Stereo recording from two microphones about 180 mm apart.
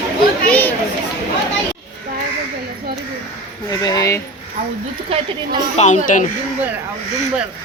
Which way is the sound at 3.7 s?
20° left (ahead or behind).